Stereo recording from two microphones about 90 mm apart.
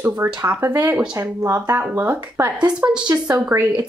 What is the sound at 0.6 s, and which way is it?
Speech, 25° right (ahead or behind).